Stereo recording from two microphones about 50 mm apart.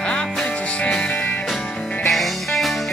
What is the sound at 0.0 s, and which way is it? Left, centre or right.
Music, left.